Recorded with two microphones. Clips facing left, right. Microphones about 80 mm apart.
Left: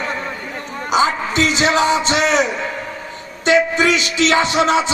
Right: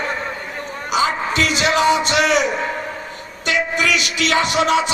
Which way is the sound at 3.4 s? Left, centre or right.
Left.